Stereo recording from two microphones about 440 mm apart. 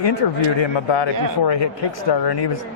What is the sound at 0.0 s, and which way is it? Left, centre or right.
Speech, left.